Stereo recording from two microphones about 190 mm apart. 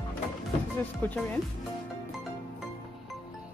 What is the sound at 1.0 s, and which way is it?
Speech, 10° left (ahead or behind).